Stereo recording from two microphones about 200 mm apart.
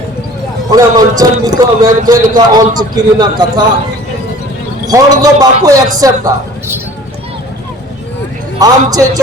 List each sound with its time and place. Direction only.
0.7 s a man's voice: 20° right (ahead or behind)
4.9 s a man's voice: 20° right (ahead or behind)
8.5 s a man's voice: 20° right (ahead or behind)